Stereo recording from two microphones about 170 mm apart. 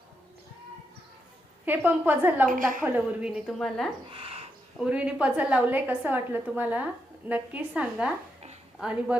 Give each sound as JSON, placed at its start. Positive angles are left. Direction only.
{"t": 1.6, "sound": "a woman's voice", "side_deg": -10}
{"t": 2.5, "sound": "a woman's voice", "side_deg": -50}
{"t": 2.8, "sound": "a woman's voice", "side_deg": -10}
{"t": 4.1, "sound": "a sound", "side_deg": -35}
{"t": 4.8, "sound": "a woman's voice", "side_deg": -5}